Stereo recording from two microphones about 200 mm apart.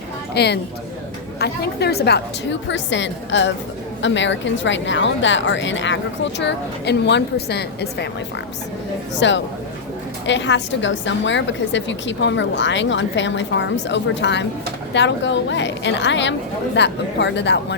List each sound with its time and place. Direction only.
0.3 s a woman's voice: 55° left (ahead or behind)
9.1 s a woman's voice: 65° left (ahead or behind)